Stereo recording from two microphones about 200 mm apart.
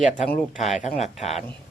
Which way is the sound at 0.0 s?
40° left (ahead or behind).